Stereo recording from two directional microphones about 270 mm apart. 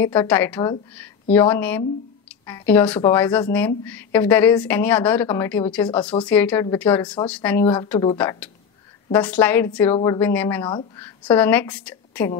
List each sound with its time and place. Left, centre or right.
0.0 s speech: centre
7.6 s speech: centre
10.6 s speech: centre
11.0 s a woman's voice: centre